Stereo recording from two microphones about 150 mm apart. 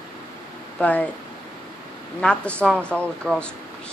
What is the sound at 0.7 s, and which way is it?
Speech, 10° left (ahead or behind).